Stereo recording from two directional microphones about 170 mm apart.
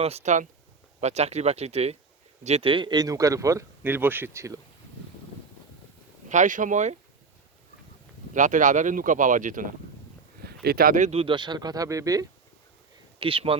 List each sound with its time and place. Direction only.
0.0 s speech: 40° right (ahead or behind); by 4.6 s 15° right (ahead or behind)
6.2 s speech: 45° right (ahead or behind)
8.3 s speech: 50° right (ahead or behind)
10.4 s speech: 65° right (ahead or behind)
11.1 s speech: 30° right (ahead or behind)
13.1 s speech: 30° right (ahead or behind)